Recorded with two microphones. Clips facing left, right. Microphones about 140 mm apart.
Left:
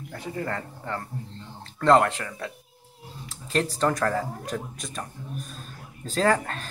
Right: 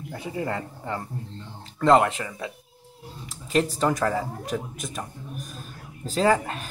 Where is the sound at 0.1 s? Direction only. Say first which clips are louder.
Right 2 dB; 15° right (ahead or behind).